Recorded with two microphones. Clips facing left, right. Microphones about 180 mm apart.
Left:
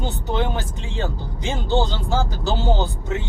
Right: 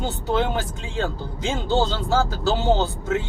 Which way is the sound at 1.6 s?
15° left (ahead or behind).